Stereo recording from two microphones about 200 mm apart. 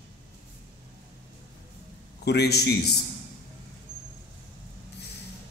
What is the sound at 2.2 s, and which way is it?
Speech, 55° left (ahead or behind).